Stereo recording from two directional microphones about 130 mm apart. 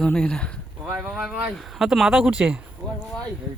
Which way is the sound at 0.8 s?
20° right (ahead or behind).